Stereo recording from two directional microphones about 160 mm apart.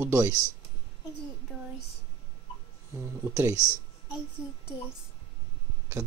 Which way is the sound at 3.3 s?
20° right (ahead or behind).